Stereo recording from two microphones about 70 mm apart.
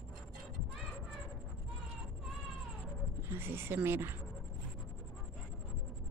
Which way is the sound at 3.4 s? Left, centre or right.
Right.